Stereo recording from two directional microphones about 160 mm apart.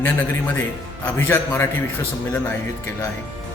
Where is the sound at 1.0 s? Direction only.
15° left (ahead or behind).